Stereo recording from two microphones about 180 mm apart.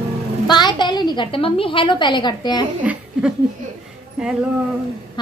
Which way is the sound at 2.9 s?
10° right (ahead or behind).